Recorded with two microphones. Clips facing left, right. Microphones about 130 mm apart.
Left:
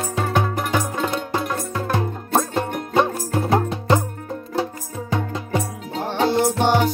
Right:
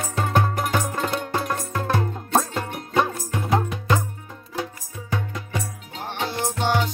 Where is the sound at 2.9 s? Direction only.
30° left (ahead or behind).